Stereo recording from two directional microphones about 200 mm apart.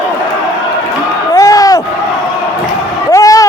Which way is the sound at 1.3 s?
15° left (ahead or behind).